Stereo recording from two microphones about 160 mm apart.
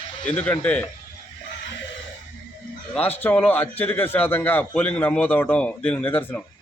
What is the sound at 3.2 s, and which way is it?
A man's voice, 10° left (ahead or behind).